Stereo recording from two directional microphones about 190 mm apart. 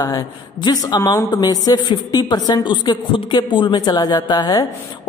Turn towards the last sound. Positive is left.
turn(degrees=20)  # may be behind; listen again after turning